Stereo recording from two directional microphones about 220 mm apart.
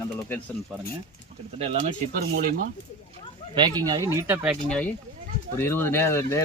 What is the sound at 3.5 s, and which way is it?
Speech, 20° right (ahead or behind).